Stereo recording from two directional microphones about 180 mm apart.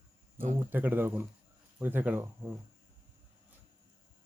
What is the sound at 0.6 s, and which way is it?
Speech, 10° right (ahead or behind).